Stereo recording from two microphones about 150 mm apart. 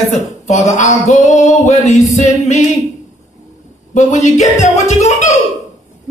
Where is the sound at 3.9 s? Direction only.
55° left (ahead or behind).